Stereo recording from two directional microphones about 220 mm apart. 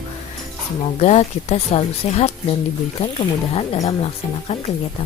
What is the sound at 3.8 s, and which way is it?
Speech, 25° left (ahead or behind).